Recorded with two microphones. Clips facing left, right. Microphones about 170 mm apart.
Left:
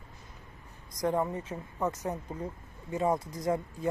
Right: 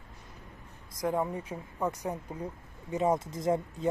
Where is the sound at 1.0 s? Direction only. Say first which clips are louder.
Left 1 dB; 10° right (ahead or behind).